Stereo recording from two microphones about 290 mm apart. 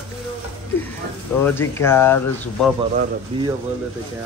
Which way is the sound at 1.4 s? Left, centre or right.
Centre.